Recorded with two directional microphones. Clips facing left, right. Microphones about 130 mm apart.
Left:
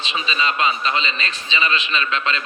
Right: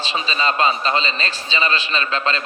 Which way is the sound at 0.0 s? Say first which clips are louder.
Right 2 dB; 35° right (ahead or behind).